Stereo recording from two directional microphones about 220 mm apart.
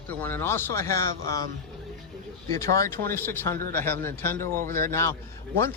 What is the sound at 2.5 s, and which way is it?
Speech, 15° left (ahead or behind).